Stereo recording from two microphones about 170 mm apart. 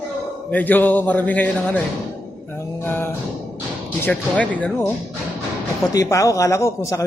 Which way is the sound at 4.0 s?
10° left (ahead or behind).